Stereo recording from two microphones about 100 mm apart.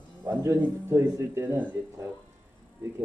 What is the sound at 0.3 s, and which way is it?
A man's voice, 25° right (ahead or behind).